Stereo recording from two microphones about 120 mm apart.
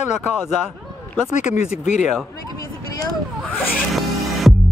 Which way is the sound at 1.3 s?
90° left.